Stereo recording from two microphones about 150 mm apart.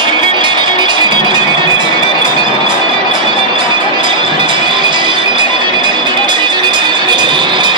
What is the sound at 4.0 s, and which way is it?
Music, 30° right (ahead or behind).